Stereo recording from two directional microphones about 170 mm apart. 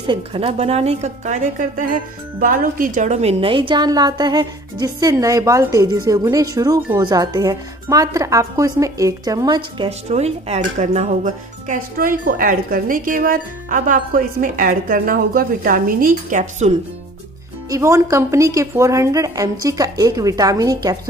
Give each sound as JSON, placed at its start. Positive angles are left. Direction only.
{"t": 0.0, "sound": "a woman's voice", "side_deg": -30}
{"t": 9.8, "sound": "speech", "side_deg": -40}
{"t": 17.6, "sound": "a woman's voice", "side_deg": -20}